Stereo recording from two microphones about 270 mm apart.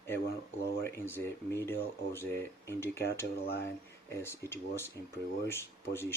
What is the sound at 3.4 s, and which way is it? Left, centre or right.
Speech, left.